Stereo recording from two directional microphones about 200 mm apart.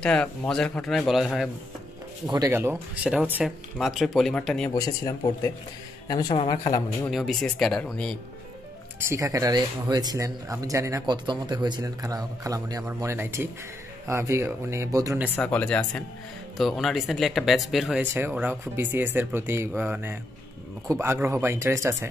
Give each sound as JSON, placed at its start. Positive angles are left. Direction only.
{"t": 0.0, "sound": "speech", "side_deg": 5}
{"t": 2.2, "sound": "speech", "side_deg": -20}
{"t": 4.7, "sound": "speech", "side_deg": 20}
{"t": 7.1, "sound": "speech", "side_deg": 0}
{"t": 9.1, "sound": "speech", "side_deg": -15}
{"t": 15.3, "sound": "speech", "side_deg": 5}